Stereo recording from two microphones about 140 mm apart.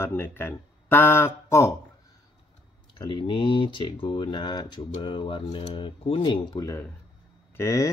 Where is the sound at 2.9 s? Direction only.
30° left (ahead or behind).